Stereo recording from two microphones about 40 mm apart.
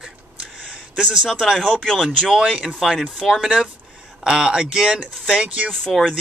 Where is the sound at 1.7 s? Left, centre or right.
Centre.